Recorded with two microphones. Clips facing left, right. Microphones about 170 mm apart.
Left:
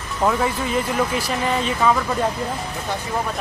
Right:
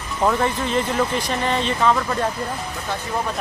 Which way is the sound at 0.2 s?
5° left (ahead or behind).